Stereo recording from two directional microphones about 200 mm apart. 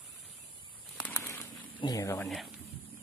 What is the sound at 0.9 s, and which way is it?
Bird flight, 5° left (ahead or behind).